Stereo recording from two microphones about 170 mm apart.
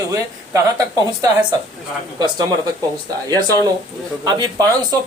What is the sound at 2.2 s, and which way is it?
Speech, 20° right (ahead or behind).